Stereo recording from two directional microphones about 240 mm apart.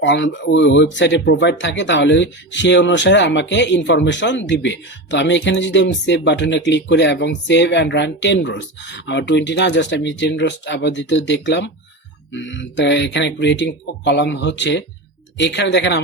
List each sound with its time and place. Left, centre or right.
0.0 s speech: left